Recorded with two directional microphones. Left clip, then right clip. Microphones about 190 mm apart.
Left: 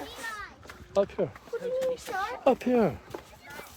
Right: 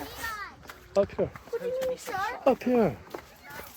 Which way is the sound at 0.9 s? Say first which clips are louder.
Right 1 dB; 10° left (ahead or behind).